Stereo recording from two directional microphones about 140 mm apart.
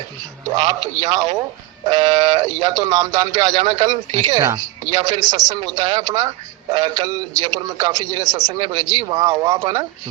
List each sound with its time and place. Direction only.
0.5 s speech: 30° right (ahead or behind)